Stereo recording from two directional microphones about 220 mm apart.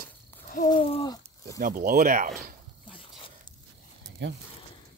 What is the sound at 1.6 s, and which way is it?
Speech, 40° right (ahead or behind).